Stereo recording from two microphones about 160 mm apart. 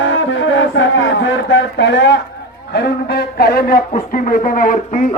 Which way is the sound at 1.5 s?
90° left.